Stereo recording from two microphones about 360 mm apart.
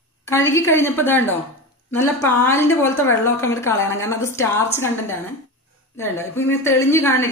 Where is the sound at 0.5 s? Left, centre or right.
Centre.